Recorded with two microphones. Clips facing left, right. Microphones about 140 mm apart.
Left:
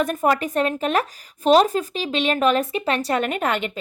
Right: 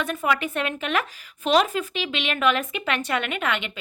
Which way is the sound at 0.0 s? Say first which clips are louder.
Left 5 dB; 45° left (ahead or behind).